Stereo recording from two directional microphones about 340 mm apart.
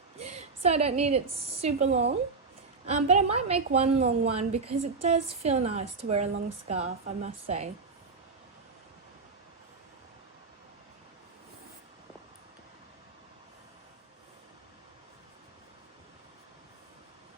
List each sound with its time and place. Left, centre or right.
0.2 s a woman's voice: centre